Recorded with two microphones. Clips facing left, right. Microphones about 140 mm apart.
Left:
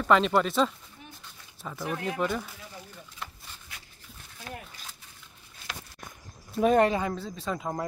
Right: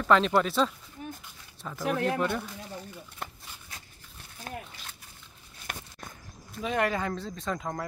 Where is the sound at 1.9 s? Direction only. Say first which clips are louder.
Right 5 dB; 70° right (ahead or behind).